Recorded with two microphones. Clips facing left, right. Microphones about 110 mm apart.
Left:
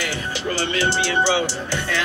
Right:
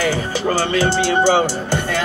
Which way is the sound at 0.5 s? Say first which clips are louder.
Right 5 dB; 45° right (ahead or behind).